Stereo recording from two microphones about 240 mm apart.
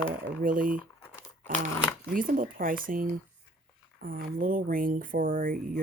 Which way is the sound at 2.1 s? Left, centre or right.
Right.